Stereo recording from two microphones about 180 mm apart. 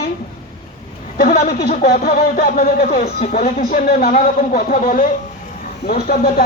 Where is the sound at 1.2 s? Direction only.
55° left (ahead or behind).